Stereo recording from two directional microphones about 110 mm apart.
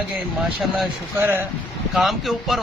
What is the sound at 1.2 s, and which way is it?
Speech, 20° right (ahead or behind).